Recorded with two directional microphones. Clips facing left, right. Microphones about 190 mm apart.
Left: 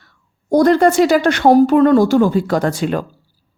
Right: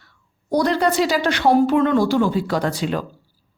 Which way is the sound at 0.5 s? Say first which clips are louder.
Left 7 dB; 50° left (ahead or behind).